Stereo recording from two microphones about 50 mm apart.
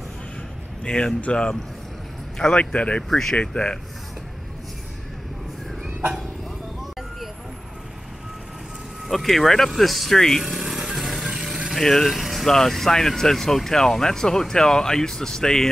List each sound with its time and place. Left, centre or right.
0.8 s speech: centre
2.6 s speech: left
3.0 s speech: centre
3.3 s speech: left
9.1 s speech: centre
10.4 s vehicle: centre
11.7 s speech: centre